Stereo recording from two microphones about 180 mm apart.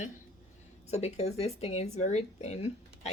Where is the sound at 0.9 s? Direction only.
35° left (ahead or behind).